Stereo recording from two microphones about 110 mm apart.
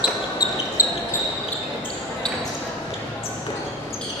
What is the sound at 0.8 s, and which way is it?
Basketball bounce, 30° left (ahead or behind).